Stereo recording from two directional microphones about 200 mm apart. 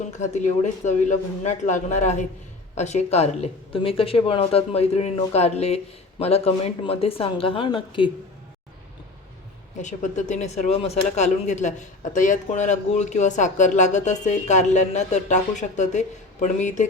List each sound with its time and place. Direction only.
0.2 s speech: 35° left (ahead or behind)
9.8 s speech: 35° left (ahead or behind)